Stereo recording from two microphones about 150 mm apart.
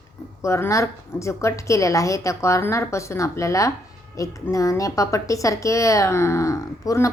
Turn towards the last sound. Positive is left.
turn(degrees=20)  # may be behind; listen again after turning